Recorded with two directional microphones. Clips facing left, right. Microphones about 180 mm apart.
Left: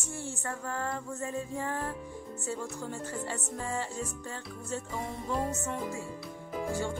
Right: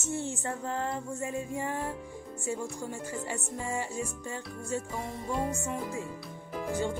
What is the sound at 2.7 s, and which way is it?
Speech, 15° right (ahead or behind).